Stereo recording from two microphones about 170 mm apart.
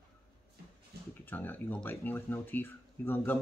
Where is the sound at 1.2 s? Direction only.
10° left (ahead or behind).